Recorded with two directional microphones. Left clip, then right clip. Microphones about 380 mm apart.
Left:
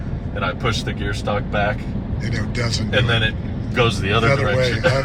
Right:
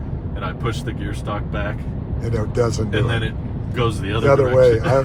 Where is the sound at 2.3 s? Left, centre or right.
Centre.